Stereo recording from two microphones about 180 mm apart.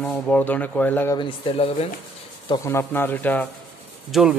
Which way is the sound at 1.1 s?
30° left (ahead or behind).